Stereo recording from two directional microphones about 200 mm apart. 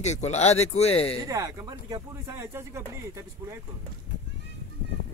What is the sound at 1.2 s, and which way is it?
Speech, 15° right (ahead or behind).